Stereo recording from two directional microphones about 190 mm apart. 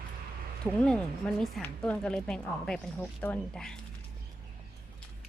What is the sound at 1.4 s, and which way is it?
Speech, 5° left (ahead or behind).